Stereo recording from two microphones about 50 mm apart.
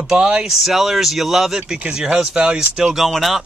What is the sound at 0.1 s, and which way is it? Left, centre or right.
Speech, centre.